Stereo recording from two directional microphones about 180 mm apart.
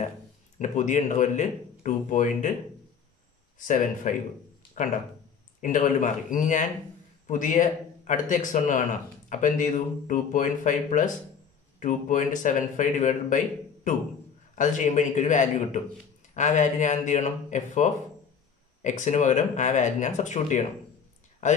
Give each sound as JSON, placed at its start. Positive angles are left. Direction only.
{"t": 0.6, "sound": "speech", "side_deg": 45}
{"t": 3.5, "sound": "speech", "side_deg": 45}
{"t": 5.6, "sound": "speech", "side_deg": 45}
{"t": 14.5, "sound": "speech", "side_deg": 45}